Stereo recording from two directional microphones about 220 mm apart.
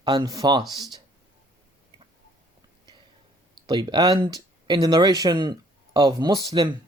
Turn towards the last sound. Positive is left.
turn(degrees=-15)  # may be behind; listen again after turning